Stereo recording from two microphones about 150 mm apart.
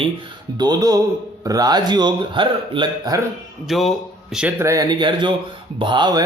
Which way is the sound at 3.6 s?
Centre (ahead or behind).